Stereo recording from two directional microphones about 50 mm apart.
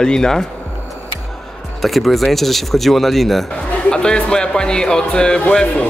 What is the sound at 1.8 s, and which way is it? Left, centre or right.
Speech, centre.